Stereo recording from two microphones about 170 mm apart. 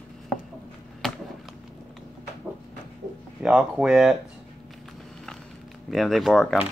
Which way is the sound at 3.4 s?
5° right (ahead or behind).